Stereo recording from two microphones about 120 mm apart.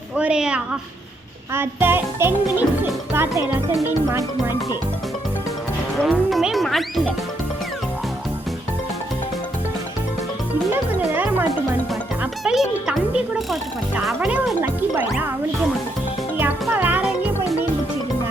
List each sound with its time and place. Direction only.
0.2 s speech: 10° right (ahead or behind)
1.5 s speech: 15° right (ahead or behind)
6.0 s speech: centre (ahead or behind)
11.1 s speech: 15° right (ahead or behind)
12.2 s speech: 5° right (ahead or behind)
14.6 s speech: 15° right (ahead or behind)
16.4 s music: 15° right (ahead or behind)